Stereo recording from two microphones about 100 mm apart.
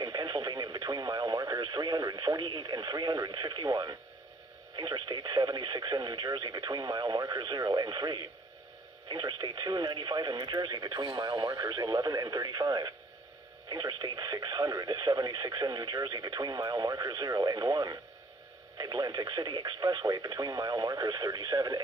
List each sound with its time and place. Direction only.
0.0 s speech: 45° right (ahead or behind)